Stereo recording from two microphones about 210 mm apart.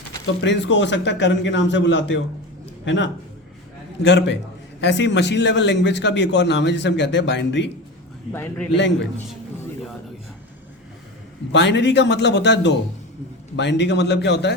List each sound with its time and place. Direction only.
0.4 s a man's voice: 60° left (ahead or behind)
8.3 s a man's voice: 10° left (ahead or behind)
11.5 s a man's voice: 55° left (ahead or behind)